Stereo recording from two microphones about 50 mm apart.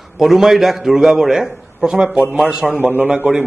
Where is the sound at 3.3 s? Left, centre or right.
Right.